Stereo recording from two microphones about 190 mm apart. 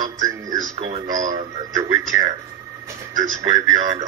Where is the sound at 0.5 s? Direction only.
40° right (ahead or behind).